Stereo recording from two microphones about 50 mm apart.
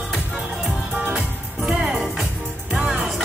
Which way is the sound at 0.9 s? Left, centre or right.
Right.